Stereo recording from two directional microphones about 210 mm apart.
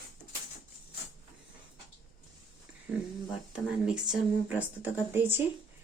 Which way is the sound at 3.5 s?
5° right (ahead or behind).